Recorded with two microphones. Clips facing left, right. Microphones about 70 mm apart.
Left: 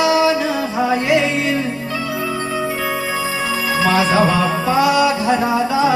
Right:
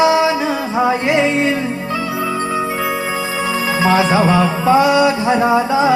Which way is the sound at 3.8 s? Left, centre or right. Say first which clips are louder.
Right 2 dB; right.